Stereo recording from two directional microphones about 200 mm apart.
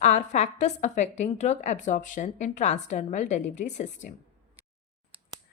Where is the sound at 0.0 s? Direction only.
35° left (ahead or behind).